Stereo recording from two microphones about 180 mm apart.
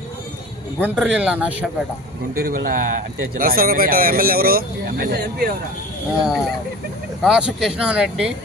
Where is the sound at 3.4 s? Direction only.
55° right (ahead or behind).